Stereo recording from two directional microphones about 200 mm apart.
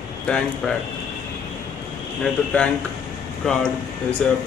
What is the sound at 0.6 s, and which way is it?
Speech, centre (ahead or behind).